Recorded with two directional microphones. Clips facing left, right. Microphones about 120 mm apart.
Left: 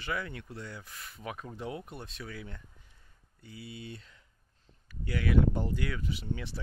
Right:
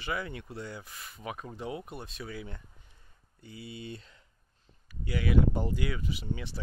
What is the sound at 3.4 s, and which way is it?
Speech, 25° right (ahead or behind).